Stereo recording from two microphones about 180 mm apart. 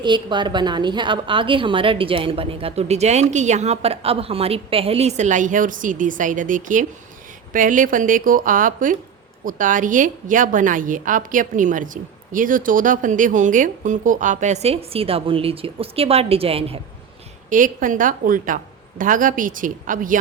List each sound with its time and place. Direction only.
0.0 s a woman's voice: 25° right (ahead or behind)
17.5 s a woman's voice: 50° right (ahead or behind)